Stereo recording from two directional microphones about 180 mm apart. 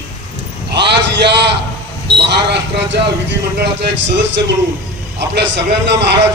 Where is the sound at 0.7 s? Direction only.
70° right (ahead or behind).